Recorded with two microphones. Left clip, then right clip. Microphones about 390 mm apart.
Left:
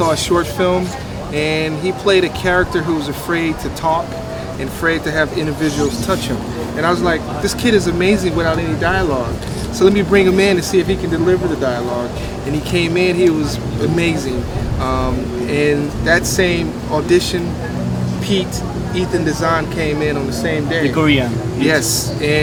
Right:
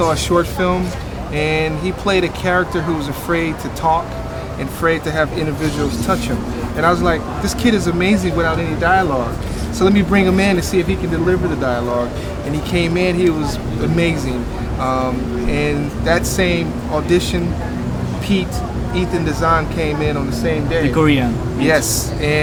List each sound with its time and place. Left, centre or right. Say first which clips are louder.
0.0 s speech: even; right
6.8 s speech: right 1 dB; right
14.8 s speech: right 1 dB; right
18.9 s speech: left 2 dB; right
20.9 s speech: even; right
21.6 s speech: even; right